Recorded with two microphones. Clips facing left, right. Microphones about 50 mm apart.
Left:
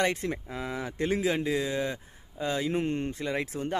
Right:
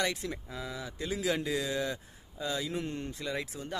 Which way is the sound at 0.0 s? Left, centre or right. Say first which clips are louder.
Left 5 dB; left.